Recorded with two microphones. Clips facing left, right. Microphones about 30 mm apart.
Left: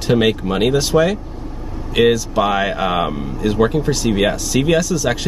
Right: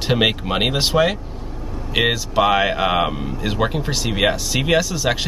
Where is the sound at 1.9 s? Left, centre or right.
Centre.